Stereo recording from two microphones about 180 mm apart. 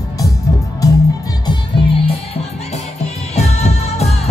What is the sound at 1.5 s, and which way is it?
Music, 30° left (ahead or behind).